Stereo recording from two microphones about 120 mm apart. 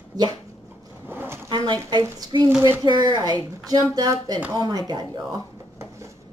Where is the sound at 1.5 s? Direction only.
40° right (ahead or behind).